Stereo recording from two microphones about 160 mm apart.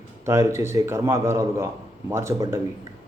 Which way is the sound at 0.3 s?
15° right (ahead or behind).